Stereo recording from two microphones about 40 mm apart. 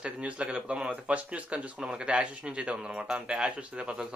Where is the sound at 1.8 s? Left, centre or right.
Centre.